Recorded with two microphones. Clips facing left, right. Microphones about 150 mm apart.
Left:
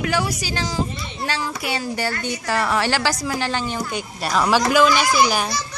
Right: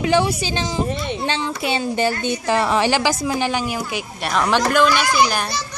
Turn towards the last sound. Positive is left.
turn(degrees=5)  # may be behind; listen again after turning